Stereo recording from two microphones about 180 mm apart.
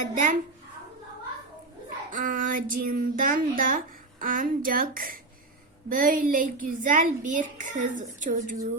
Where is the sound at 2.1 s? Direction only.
50° right (ahead or behind).